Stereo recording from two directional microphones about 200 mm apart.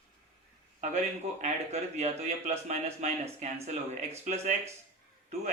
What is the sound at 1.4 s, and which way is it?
Speech, 35° right (ahead or behind).